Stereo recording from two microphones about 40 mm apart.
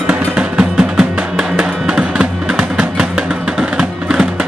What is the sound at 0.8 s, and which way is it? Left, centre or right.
Music, centre.